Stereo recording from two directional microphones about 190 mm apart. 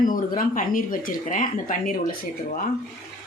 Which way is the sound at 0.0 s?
45° left (ahead or behind).